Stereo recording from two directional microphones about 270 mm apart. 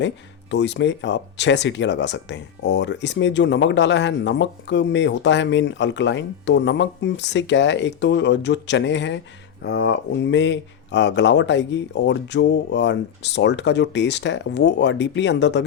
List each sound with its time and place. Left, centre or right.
0.5 s speech: left